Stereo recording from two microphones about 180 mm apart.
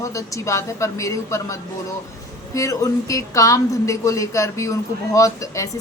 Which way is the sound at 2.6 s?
15° left (ahead or behind).